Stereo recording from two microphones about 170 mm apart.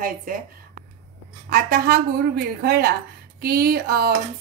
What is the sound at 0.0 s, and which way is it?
Speech, 55° right (ahead or behind).